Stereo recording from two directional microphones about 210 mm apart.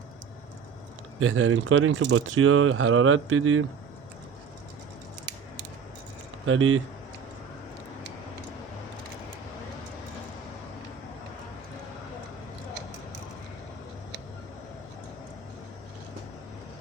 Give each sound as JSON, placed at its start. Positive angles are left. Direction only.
{"t": 1.2, "sound": "speech", "side_deg": -85}
{"t": 6.4, "sound": "speech", "side_deg": -70}